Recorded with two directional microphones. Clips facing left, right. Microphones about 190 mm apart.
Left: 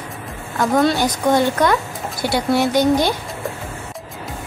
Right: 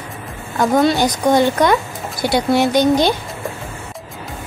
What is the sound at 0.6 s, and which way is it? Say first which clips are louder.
Speech: right 2 dB; 20° right (ahead or behind).